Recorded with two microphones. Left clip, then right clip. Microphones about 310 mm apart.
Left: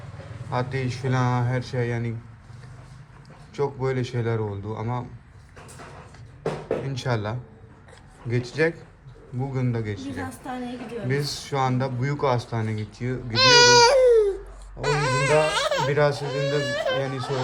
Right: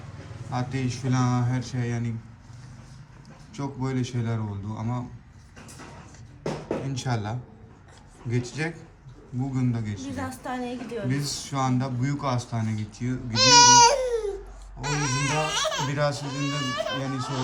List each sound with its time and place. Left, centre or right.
0.5 s a woman's voice: centre
3.5 s a woman's voice: centre
6.8 s a woman's voice: centre
13.3 s babbling: centre
14.8 s baby cry: centre